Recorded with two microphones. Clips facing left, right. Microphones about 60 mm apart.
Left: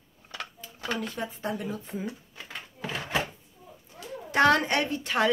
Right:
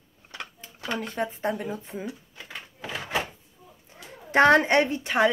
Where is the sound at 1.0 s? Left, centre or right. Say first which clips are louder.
Right 4 dB; right.